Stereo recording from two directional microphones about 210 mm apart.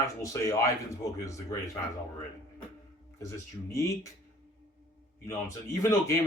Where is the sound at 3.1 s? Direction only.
15° left (ahead or behind).